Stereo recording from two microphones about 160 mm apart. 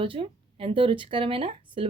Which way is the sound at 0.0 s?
35° right (ahead or behind).